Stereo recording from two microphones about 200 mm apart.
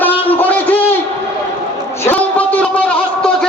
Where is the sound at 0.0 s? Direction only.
10° left (ahead or behind).